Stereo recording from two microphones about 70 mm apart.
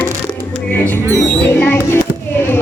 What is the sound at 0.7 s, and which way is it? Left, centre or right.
Music, left.